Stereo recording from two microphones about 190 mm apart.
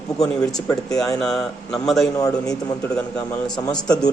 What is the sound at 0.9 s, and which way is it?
Speech, centre (ahead or behind).